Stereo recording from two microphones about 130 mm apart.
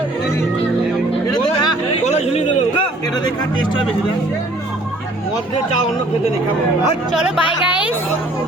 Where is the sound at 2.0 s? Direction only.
60° left (ahead or behind).